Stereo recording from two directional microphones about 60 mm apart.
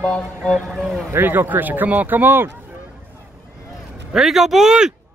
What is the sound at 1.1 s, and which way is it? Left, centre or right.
A man's voice, right.